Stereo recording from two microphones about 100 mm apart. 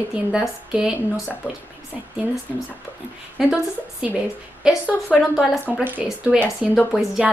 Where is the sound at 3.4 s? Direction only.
5° right (ahead or behind).